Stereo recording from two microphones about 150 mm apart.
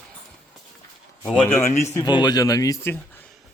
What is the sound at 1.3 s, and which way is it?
Speech, 10° left (ahead or behind).